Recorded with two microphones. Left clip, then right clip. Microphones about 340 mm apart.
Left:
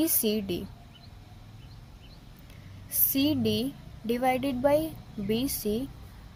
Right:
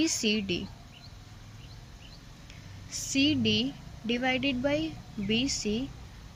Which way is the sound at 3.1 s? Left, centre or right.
Centre.